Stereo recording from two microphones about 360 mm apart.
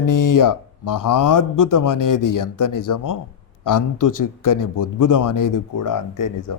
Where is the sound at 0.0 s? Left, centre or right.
Left.